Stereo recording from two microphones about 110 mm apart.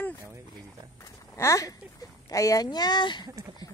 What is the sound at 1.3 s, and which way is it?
Speech, 30° left (ahead or behind).